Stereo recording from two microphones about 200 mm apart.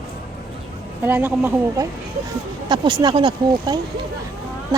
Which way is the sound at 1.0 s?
10° right (ahead or behind).